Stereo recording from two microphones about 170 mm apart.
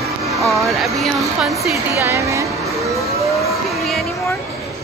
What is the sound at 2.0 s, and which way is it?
Speech, 15° right (ahead or behind).